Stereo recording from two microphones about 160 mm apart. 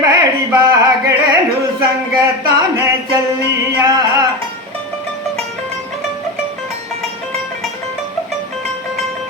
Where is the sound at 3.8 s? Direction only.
20° right (ahead or behind).